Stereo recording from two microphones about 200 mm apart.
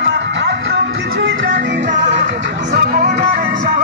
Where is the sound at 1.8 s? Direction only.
40° right (ahead or behind).